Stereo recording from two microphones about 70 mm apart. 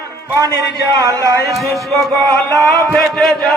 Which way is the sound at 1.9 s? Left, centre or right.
Right.